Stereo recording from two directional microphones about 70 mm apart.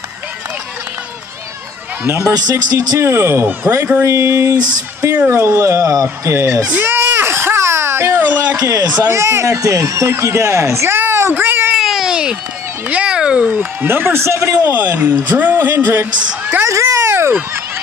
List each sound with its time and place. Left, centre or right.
2.0 s speech: right
3.6 s speech: centre
4.0 s speech: right
6.8 s baby cry: right
8.2 s speech: right
8.5 s speech: right
11.7 s a sound: centre
12.8 s cat: centre
13.5 s speech: right
14.6 s speech: right
16.7 s a sound: right